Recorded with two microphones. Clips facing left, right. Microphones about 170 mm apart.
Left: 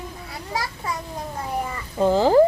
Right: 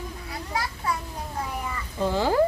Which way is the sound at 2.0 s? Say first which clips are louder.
Left 7 dB; 40° left (ahead or behind).